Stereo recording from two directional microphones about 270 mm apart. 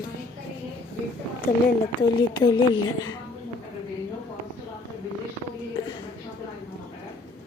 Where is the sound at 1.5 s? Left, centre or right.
Left.